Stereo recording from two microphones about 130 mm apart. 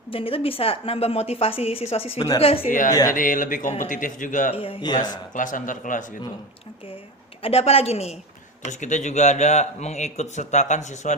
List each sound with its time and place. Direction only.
0.1 s a woman's voice: 45° left (ahead or behind)
3.1 s a man's voice: 90° left
4.5 s a woman's voice: 45° left (ahead or behind)
5.3 s speech: 85° left
7.4 s a woman's voice: 50° left (ahead or behind)
8.6 s a man's voice: 65° left (ahead or behind)